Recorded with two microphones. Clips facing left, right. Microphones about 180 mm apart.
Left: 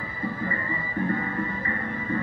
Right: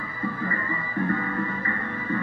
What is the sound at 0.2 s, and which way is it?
Music, 25° left (ahead or behind).